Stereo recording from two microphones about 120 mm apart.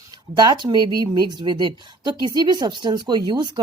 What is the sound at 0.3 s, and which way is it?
Speech, 40° right (ahead or behind).